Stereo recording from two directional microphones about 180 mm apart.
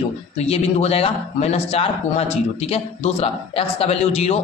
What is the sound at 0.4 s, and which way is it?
A man's voice, 35° left (ahead or behind).